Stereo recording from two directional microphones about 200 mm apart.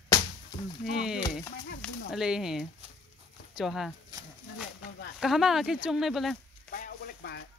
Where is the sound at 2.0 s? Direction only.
5° right (ahead or behind).